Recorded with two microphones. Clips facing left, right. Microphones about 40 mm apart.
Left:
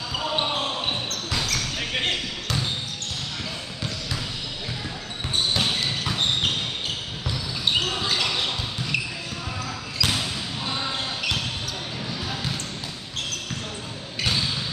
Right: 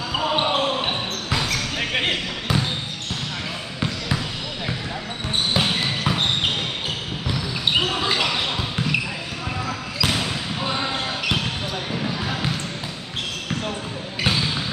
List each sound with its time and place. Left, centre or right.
0.1 s basketball bounce: right
5.5 s basketball bounce: centre
10.2 s basketball bounce: right
11.9 s basketball bounce: right
14.2 s basketball bounce: right